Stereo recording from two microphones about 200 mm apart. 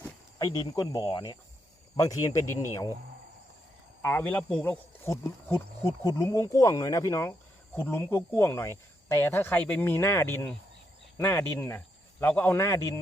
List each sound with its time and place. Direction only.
0.3 s speech: 20° left (ahead or behind)
4.0 s speech: 10° left (ahead or behind)